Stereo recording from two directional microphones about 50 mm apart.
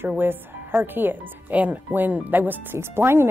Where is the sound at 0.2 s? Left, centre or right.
Right.